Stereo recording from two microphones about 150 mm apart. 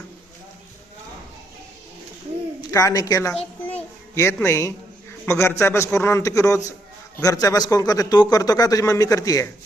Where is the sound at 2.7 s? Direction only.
20° left (ahead or behind).